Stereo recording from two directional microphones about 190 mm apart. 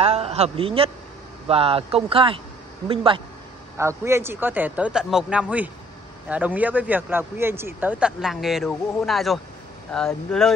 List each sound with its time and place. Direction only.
0.0 s a man's voice: 35° right (ahead or behind)
3.7 s speech: 15° right (ahead or behind); by 10.5 s centre (ahead or behind)